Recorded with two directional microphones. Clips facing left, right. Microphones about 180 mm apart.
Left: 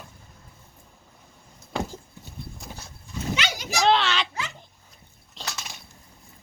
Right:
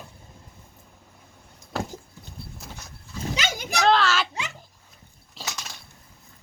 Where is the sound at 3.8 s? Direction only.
Centre (ahead or behind).